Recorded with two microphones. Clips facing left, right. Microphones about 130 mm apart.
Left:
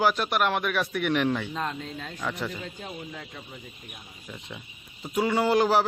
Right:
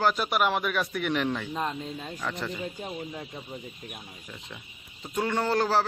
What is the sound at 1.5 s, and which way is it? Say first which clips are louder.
Speech: right 1 dB; 10° right (ahead or behind).